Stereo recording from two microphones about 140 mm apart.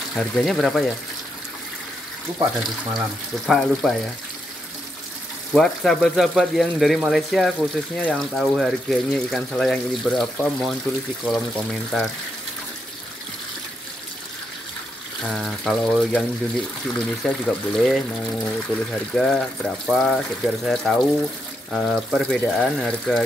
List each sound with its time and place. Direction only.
0.1 s speech: centre (ahead or behind)
2.3 s speech: 30° right (ahead or behind)
3.4 s speech: centre (ahead or behind)
5.5 s speech: 5° left (ahead or behind)
15.2 s speech: centre (ahead or behind)
19.1 s speech: 5° left (ahead or behind)